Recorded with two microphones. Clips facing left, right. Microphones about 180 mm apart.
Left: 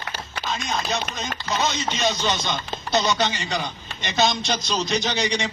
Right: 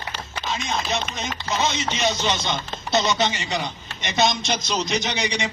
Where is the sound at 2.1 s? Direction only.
25° right (ahead or behind).